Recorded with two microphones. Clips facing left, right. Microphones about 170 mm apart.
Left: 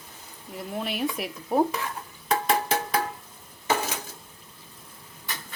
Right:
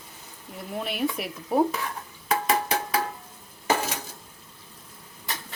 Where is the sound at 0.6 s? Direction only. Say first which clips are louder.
Right 1 dB; centre (ahead or behind).